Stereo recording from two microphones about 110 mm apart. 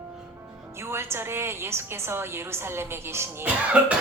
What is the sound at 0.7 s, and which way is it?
A woman's voice, 25° right (ahead or behind).